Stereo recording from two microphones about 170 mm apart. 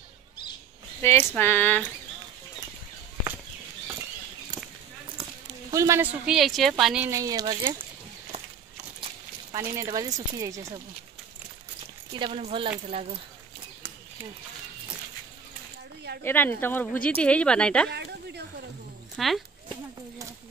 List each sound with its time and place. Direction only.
1.0 s speech: 10° left (ahead or behind)
5.7 s speech: 20° right (ahead or behind)
6.2 s speech: centre (ahead or behind)
7.1 s speech: 20° right (ahead or behind)
9.8 s speech: 20° right (ahead or behind)
12.1 s speech: 35° right (ahead or behind)
16.3 s speech: 10° left (ahead or behind)
17.8 s a sound: 80° right
19.1 s speech: centre (ahead or behind)